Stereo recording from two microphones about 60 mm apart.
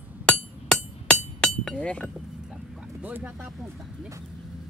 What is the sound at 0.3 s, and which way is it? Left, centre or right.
Hammer, centre.